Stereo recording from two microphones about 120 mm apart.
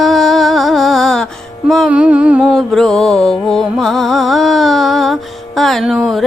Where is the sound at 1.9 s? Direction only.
10° right (ahead or behind).